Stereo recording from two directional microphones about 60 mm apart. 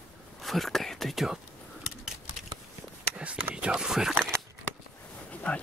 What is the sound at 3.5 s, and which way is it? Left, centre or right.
Speech, centre.